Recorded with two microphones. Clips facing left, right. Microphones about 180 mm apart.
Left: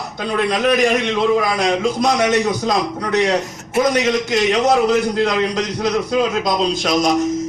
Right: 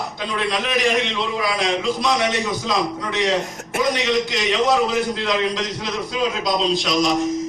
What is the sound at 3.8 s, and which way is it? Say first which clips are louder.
A man's voice: left 4 dB; 45° left (ahead or behind).